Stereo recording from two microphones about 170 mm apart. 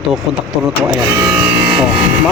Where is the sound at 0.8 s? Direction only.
15° right (ahead or behind).